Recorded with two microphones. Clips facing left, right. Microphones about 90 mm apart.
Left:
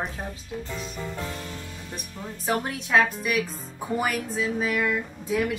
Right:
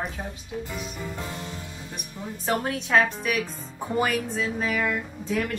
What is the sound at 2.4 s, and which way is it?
A woman's voice, centre (ahead or behind).